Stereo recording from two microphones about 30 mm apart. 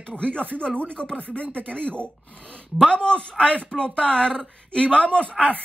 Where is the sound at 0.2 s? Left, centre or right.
Left.